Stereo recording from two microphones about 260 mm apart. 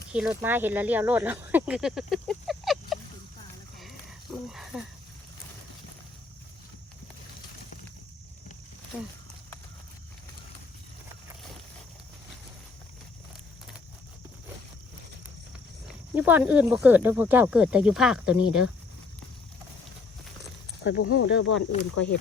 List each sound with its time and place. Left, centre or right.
0.1 s speech: centre
3.8 s a sound: centre
16.1 s speech: centre
20.8 s speech: left
22.0 s speech: centre